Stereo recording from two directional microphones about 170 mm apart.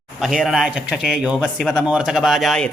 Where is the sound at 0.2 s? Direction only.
5° right (ahead or behind).